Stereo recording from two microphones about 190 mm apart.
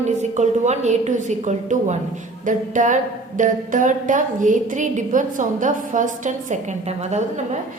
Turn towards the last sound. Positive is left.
turn(degrees=-35)  # may be behind; listen again after turning